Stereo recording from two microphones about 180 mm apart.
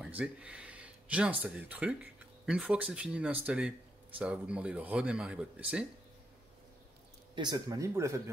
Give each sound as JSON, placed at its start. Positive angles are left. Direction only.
{"t": 0.0, "sound": "a sound", "side_deg": -5}
{"t": 1.4, "sound": "speech", "side_deg": -10}
{"t": 7.3, "sound": "speech", "side_deg": -20}